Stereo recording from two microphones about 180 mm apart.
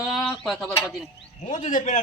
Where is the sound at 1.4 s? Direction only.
40° left (ahead or behind).